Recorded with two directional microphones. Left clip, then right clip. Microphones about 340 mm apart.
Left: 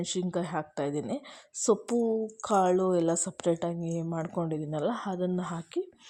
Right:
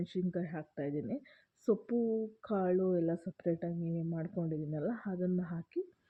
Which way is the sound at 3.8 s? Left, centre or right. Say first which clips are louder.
Left 6 dB; left.